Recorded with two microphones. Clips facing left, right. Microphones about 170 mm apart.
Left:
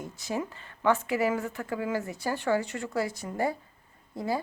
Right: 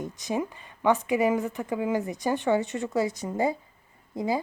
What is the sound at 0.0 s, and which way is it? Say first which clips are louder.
A woman's voice: right 3 dB; 20° right (ahead or behind).